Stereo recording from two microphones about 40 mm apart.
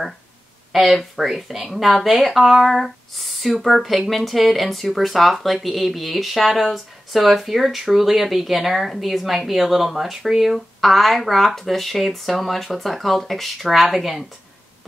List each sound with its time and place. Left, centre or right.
0.7 s speech: centre